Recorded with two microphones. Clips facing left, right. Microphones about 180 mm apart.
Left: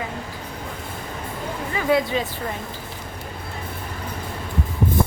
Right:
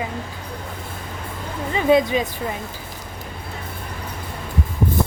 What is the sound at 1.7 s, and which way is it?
Speech, 20° right (ahead or behind).